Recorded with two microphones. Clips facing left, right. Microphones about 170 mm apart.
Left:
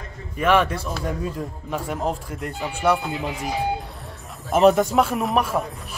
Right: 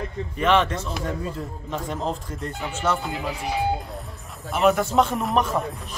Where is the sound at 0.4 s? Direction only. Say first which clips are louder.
Left 1 dB; 10° left (ahead or behind).